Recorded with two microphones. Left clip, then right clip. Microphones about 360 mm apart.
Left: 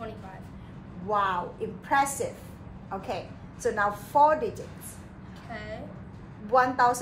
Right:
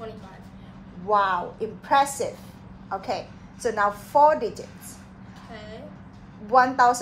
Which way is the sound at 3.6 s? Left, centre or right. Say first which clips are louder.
Right 3 dB; centre.